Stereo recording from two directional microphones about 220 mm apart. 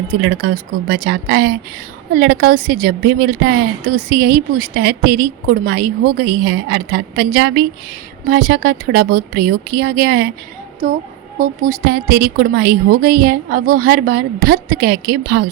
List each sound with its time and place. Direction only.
0.1 s a woman's voice: 50° right (ahead or behind)
11.3 s a woman's voice: 35° right (ahead or behind)